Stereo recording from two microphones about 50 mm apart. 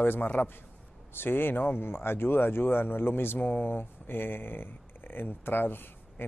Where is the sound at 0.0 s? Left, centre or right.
Left.